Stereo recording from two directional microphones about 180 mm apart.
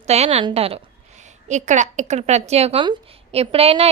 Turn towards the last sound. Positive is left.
turn(degrees=-35)  # may be behind; listen again after turning